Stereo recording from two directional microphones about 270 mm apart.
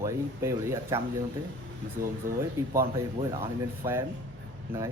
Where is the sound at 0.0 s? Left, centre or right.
Centre.